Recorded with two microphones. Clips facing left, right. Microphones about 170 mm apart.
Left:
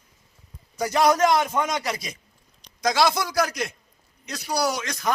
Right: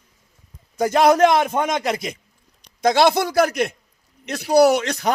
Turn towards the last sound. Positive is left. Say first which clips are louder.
# right 8 dB
turn(degrees=-70)  # may be behind; listen again after turning